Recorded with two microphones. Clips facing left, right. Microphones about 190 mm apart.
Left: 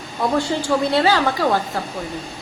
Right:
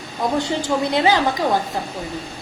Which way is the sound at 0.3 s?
20° right (ahead or behind).